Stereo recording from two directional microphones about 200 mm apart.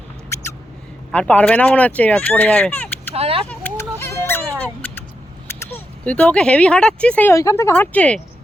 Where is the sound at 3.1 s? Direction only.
30° right (ahead or behind).